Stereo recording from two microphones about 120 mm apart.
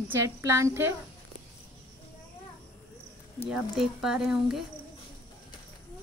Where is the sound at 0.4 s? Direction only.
25° right (ahead or behind).